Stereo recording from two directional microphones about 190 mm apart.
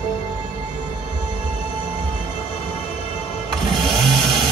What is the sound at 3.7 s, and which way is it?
Vehicle, centre (ahead or behind).